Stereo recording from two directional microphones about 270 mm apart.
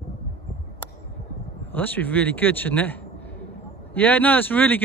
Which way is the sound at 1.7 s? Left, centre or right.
Centre.